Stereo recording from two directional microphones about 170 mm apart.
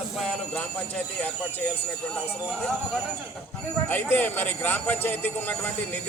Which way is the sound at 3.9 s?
10° left (ahead or behind).